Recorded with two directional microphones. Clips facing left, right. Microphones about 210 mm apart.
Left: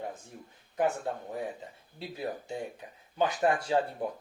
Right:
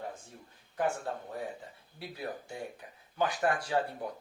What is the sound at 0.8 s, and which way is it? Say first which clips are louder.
Speech: left 3 dB; 20° left (ahead or behind).